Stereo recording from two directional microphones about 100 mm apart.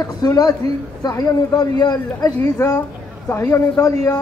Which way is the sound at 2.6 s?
30° left (ahead or behind).